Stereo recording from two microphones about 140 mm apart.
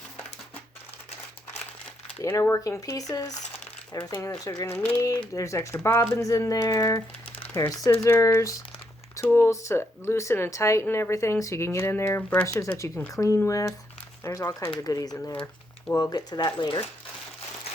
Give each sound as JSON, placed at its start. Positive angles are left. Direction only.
{"t": 2.2, "sound": "speech", "side_deg": 20}
{"t": 3.3, "sound": "a sound", "side_deg": 55}
{"t": 4.0, "sound": "speech", "side_deg": 20}